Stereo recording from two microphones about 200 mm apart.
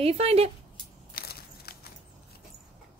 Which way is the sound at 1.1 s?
50° left (ahead or behind).